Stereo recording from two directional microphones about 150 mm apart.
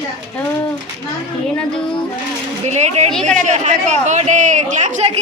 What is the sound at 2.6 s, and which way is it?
Speech, 50° right (ahead or behind).